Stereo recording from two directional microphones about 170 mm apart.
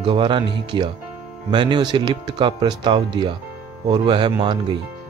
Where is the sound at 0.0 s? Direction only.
30° right (ahead or behind).